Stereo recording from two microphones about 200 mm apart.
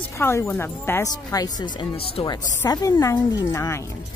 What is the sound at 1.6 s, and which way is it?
Speech, 25° left (ahead or behind).